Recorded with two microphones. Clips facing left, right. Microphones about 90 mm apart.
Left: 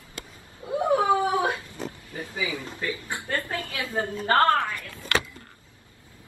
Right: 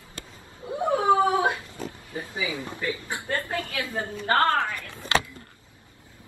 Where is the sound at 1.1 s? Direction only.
25° right (ahead or behind).